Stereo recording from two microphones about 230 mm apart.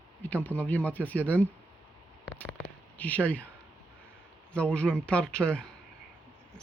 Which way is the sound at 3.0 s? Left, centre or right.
Centre.